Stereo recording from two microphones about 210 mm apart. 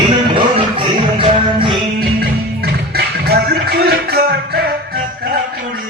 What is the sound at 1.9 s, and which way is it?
Music, 45° right (ahead or behind).